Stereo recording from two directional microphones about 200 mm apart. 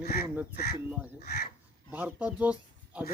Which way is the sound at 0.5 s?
50° left (ahead or behind).